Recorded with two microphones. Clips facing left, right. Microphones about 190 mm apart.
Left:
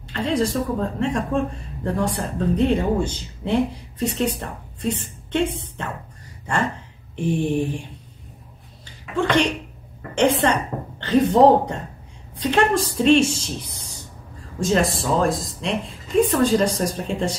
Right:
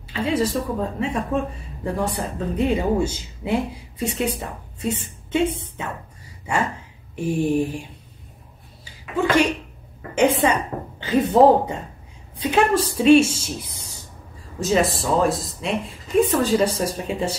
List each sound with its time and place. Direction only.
0.0 s a woman's voice: 5° right (ahead or behind)
8.8 s a sound: 5° right (ahead or behind)
10.4 s a woman's voice: 5° right (ahead or behind)